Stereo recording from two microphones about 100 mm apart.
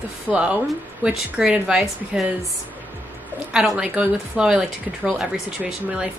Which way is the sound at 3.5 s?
5° right (ahead or behind).